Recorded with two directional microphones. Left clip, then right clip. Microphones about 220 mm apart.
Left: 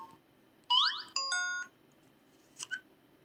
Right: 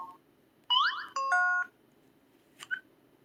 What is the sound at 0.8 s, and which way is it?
Music, 10° right (ahead or behind).